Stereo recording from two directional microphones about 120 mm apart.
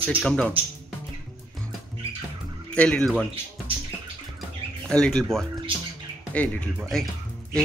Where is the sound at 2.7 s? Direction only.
10° left (ahead or behind).